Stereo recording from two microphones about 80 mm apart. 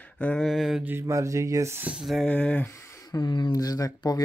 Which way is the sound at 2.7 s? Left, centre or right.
Left.